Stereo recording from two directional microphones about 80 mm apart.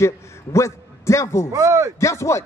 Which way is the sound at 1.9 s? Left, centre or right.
Left.